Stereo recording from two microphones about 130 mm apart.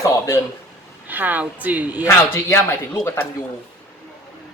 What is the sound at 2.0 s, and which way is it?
Speech, 20° left (ahead or behind).